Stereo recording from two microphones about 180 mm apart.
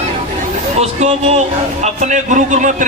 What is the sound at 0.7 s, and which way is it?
A man's voice, 35° right (ahead or behind).